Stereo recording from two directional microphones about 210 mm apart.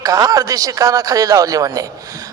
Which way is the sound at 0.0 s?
15° right (ahead or behind).